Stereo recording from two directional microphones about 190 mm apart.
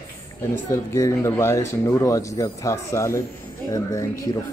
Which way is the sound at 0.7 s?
15° left (ahead or behind).